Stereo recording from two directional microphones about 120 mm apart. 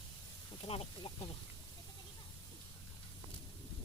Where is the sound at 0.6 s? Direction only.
50° left (ahead or behind).